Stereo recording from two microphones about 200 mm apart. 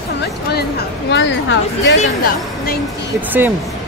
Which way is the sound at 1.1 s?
65° left (ahead or behind).